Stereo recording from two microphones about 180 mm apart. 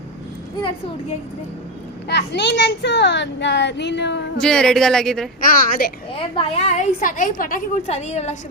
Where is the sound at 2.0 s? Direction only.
70° left (ahead or behind).